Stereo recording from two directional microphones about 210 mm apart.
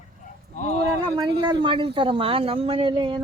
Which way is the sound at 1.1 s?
20° right (ahead or behind).